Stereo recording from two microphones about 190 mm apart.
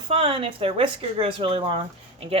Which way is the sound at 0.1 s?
30° right (ahead or behind).